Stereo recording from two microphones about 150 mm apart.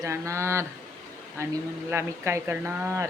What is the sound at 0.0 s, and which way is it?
Speech, 20° right (ahead or behind).